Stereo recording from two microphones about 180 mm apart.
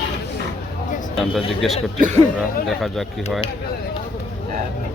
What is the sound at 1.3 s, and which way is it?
Speech, centre (ahead or behind).